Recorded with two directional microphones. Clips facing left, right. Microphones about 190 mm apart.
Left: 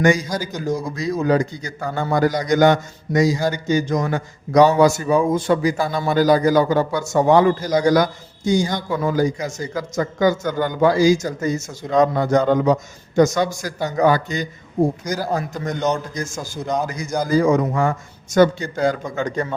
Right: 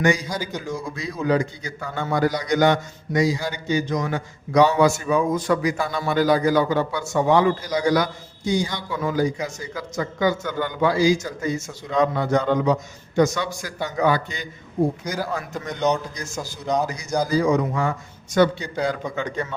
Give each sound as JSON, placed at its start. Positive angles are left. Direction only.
{"t": 0.0, "sound": "a man's voice", "side_deg": 45}
{"t": 16.6, "sound": "a man's voice", "side_deg": 0}
{"t": 17.2, "sound": "a man's voice", "side_deg": 50}